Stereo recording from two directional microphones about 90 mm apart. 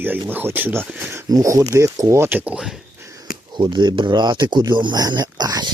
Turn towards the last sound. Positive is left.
turn(degrees=-50)  # may be behind; listen again after turning